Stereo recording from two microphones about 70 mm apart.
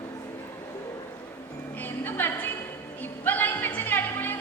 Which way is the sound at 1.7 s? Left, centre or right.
Left.